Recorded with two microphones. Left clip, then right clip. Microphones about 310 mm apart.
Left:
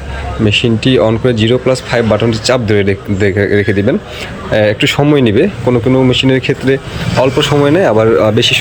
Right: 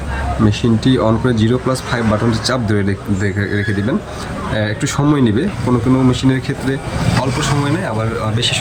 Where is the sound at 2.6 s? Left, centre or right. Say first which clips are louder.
Left 7 dB; centre.